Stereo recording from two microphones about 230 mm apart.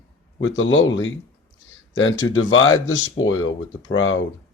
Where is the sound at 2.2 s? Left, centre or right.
Centre.